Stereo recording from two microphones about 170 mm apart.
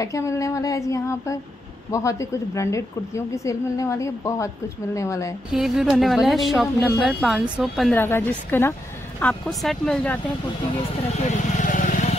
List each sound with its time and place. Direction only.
0.0 s a woman's voice: 20° left (ahead or behind)
5.5 s a woman's voice: centre (ahead or behind)
7.9 s a woman's voice: 15° left (ahead or behind)
11.1 s vehicle: 50° left (ahead or behind)